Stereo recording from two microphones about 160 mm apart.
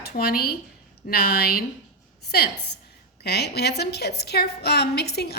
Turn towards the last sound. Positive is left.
turn(degrees=90)